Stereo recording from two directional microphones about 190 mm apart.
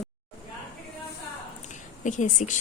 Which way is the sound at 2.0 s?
40° left (ahead or behind).